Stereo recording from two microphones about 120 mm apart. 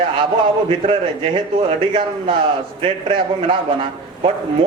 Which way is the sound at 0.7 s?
50° right (ahead or behind).